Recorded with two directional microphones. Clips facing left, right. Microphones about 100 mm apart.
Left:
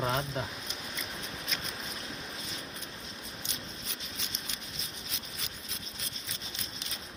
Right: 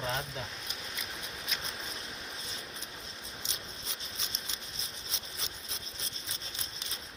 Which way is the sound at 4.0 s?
30° right (ahead or behind).